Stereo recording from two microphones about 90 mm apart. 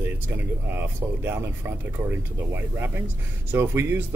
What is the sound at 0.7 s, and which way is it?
Speech, 25° right (ahead or behind).